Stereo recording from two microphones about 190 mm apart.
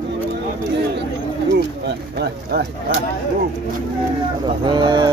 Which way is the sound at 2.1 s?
60° right (ahead or behind).